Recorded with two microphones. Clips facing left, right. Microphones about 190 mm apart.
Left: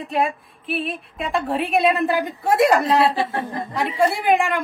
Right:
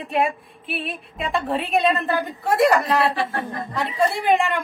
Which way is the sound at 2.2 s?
15° left (ahead or behind).